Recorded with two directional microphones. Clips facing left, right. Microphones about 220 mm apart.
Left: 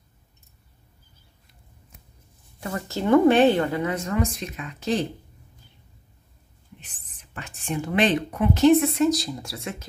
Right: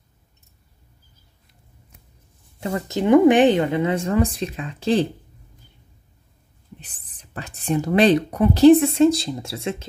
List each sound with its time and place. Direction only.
2.6 s speech: 20° right (ahead or behind)
6.8 s speech: 35° right (ahead or behind)